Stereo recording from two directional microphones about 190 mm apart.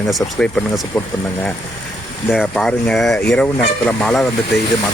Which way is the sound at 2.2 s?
Centre (ahead or behind).